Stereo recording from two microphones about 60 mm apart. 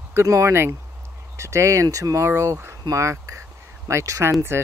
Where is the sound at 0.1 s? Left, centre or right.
Right.